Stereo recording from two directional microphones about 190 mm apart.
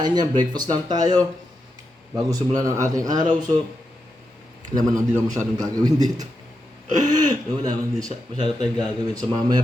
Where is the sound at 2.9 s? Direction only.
20° right (ahead or behind).